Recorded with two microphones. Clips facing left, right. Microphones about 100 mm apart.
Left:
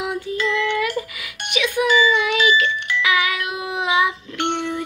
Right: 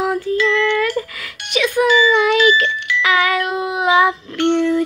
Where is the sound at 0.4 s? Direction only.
15° left (ahead or behind).